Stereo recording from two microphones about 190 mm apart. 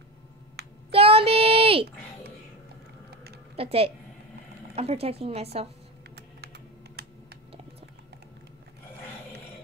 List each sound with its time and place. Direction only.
0.6 s a sound: 60° right (ahead or behind)
0.9 s child singing: 30° right (ahead or behind)
3.5 s a woman's voice: 30° right (ahead or behind)
6.1 s computer keyboard: 60° right (ahead or behind)